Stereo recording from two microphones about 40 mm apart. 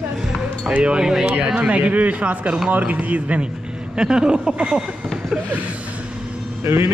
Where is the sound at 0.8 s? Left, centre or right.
Right.